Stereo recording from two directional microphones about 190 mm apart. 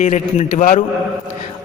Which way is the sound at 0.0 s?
35° left (ahead or behind).